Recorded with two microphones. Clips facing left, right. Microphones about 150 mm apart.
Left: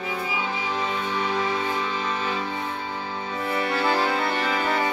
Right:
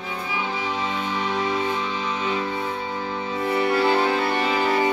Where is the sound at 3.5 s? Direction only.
25° right (ahead or behind).